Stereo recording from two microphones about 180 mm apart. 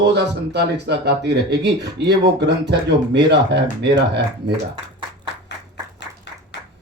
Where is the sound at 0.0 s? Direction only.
70° right (ahead or behind).